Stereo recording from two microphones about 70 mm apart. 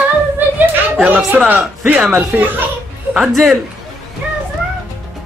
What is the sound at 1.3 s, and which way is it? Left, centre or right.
Speech, right.